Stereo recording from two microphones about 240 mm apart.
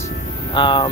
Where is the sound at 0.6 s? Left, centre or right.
Centre.